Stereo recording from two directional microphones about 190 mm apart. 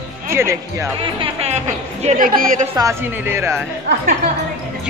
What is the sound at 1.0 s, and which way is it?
Speech, 30° right (ahead or behind).